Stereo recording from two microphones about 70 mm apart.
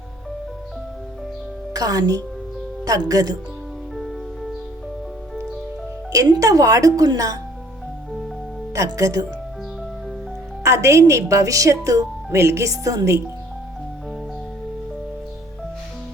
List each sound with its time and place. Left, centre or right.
1.7 s a woman's voice: right
6.3 s a woman's voice: right
8.7 s speech: right
10.6 s speech: right